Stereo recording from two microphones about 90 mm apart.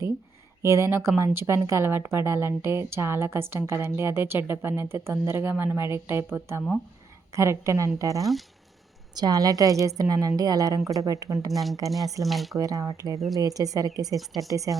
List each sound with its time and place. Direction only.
0.6 s a woman's voice: 35° right (ahead or behind)
8.2 s speech: centre (ahead or behind)
9.1 s a woman's voice: 45° right (ahead or behind)
11.5 s speech: centre (ahead or behind)
12.5 s a woman's voice: 40° right (ahead or behind)